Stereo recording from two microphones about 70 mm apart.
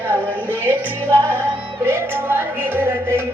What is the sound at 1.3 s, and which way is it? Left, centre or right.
Music, right.